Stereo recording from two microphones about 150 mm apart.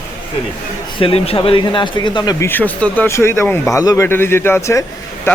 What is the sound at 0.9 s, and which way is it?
Speech, 40° left (ahead or behind).